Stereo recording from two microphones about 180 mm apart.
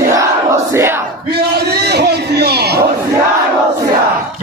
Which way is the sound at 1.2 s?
60° right (ahead or behind).